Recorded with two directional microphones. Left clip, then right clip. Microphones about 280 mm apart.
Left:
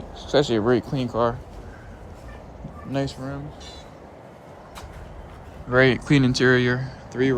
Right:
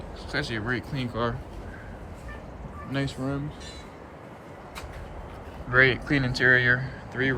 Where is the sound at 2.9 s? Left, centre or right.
Centre.